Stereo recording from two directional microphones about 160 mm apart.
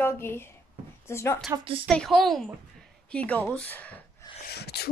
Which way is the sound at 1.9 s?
Centre (ahead or behind).